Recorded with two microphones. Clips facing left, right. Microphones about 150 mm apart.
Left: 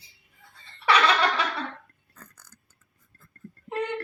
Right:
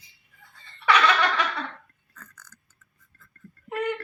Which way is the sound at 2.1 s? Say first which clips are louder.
Right 1 dB; 35° left (ahead or behind).